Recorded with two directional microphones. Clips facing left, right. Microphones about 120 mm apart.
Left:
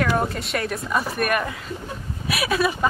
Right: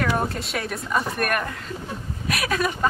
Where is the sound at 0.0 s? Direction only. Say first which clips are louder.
Left 2 dB; centre (ahead or behind).